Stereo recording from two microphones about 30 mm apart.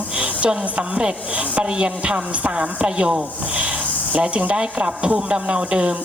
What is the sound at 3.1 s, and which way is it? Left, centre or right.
Rub, right.